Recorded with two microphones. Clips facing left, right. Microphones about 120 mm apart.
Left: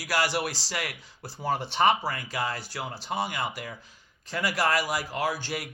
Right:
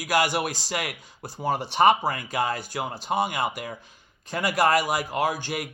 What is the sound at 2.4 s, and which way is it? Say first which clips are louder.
A man's voice: right 4 dB; 20° right (ahead or behind).